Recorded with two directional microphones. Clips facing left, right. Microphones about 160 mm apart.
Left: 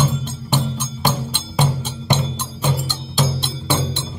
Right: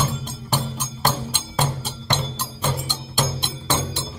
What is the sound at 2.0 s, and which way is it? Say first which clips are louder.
Music: left 4 dB; 5° left (ahead or behind).